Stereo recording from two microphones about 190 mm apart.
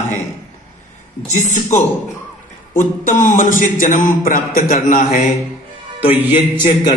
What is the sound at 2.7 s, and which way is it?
A man's voice, 40° left (ahead or behind).